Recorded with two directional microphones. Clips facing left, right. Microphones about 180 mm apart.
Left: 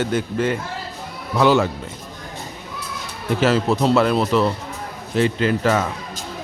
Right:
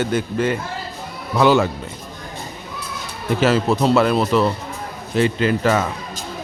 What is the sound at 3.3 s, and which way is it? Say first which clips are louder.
A man's voice: right 1 dB; 5° right (ahead or behind).